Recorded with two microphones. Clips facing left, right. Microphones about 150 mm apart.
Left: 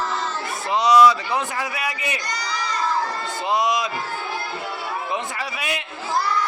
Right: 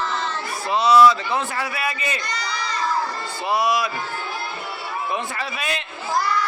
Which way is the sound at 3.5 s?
20° left (ahead or behind).